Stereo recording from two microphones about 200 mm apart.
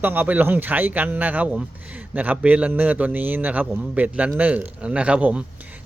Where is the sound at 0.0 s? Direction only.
10° right (ahead or behind).